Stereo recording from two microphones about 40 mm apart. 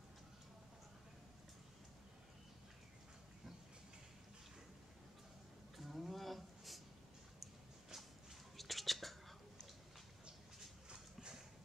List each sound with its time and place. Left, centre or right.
5.8 s a sound: centre
8.5 s whispering: centre
10.9 s clip-clop: centre